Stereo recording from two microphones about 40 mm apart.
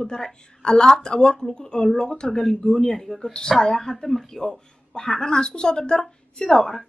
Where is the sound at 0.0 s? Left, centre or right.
Centre.